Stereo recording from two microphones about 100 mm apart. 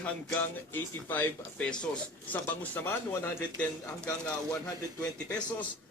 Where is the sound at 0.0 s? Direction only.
20° left (ahead or behind).